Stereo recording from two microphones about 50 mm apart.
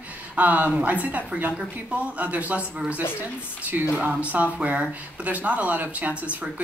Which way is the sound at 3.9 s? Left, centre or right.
Right.